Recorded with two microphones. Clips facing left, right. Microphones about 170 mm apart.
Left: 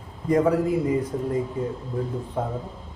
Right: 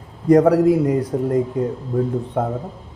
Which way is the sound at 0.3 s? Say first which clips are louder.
Right 8 dB; 75° right (ahead or behind).